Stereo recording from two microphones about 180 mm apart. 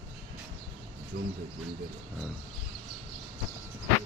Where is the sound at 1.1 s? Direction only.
55° right (ahead or behind).